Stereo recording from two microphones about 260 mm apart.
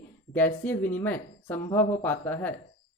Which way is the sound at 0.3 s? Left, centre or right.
Centre.